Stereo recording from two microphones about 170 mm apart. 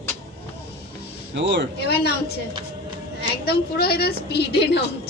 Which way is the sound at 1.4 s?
90° right.